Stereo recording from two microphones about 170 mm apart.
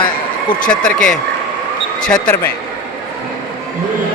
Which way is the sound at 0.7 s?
5° left (ahead or behind).